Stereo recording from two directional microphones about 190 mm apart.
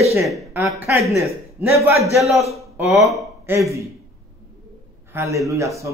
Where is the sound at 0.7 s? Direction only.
10° right (ahead or behind).